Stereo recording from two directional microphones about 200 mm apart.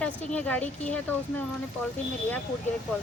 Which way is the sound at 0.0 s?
5° left (ahead or behind).